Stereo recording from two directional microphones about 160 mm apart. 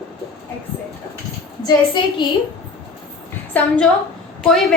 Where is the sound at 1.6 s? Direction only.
25° left (ahead or behind).